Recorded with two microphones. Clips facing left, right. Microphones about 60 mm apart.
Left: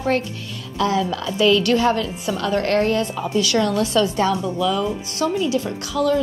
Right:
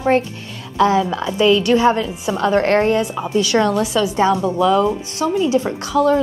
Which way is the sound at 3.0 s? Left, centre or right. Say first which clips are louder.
Right 2 dB; centre.